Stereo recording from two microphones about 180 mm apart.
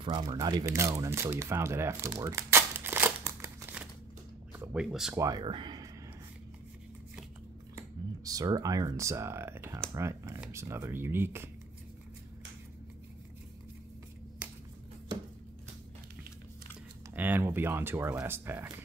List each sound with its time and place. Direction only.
0.0 s speech: 25° right (ahead or behind); by 5.1 s 5° right (ahead or behind)
5.1 s speech: 20° right (ahead or behind)
8.2 s speech: 20° right (ahead or behind)
17.1 s speech: 10° right (ahead or behind)